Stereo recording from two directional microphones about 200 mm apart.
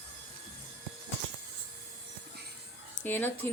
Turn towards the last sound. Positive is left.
turn(degrees=10)  # may be behind; listen again after turning